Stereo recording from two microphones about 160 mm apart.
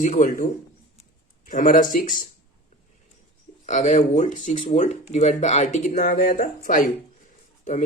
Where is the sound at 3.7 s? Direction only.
50° left (ahead or behind).